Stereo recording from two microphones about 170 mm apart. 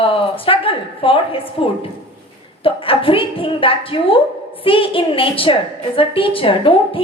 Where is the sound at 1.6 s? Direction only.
30° left (ahead or behind).